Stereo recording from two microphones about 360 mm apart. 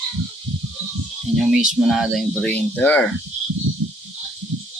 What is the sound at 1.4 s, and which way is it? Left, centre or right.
Speech, centre.